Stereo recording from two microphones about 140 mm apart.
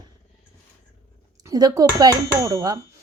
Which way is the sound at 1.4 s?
25° right (ahead or behind).